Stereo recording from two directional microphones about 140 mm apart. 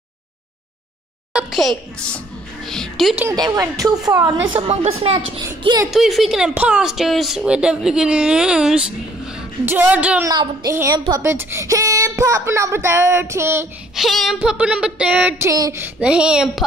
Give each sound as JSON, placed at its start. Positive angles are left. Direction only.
{"t": 1.3, "sound": "speech", "side_deg": 0}
{"t": 3.3, "sound": "speech", "side_deg": -25}
{"t": 4.6, "sound": "a woman's voice", "side_deg": -45}
{"t": 5.9, "sound": "speech", "side_deg": 0}
{"t": 10.2, "sound": "speech", "side_deg": -30}
{"t": 10.7, "sound": "speech", "side_deg": -20}
{"t": 13.9, "sound": "speech", "side_deg": 0}
{"t": 15.8, "sound": "speech", "side_deg": -5}